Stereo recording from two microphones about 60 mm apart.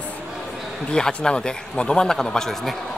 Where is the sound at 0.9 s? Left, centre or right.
Centre.